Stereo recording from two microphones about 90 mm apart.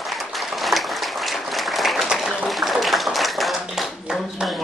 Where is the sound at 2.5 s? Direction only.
Centre (ahead or behind).